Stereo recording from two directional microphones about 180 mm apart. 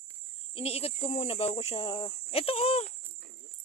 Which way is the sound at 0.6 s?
35° left (ahead or behind).